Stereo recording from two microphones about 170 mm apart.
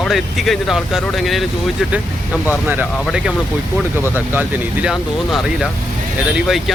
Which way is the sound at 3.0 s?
5° right (ahead or behind).